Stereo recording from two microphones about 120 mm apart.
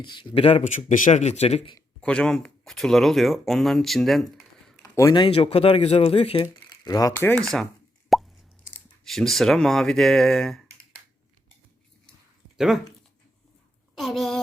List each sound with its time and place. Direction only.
0.0 s speech: 40° left (ahead or behind)
0.6 s speech: 90° left; by 1.7 s 60° left (ahead or behind)
2.0 s speech: 10° left (ahead or behind)
4.8 s a sound: 25° left (ahead or behind)
5.1 s speech: 45° left (ahead or behind)
6.4 s speech: 30° left (ahead or behind)
7.2 s speech: 15° left (ahead or behind)
7.4 s speech: 5° left (ahead or behind)
8.1 s plop: centre (ahead or behind)
9.0 s speech: centre (ahead or behind)
12.5 s speech: 5° right (ahead or behind)
13.9 s a sound: centre (ahead or behind)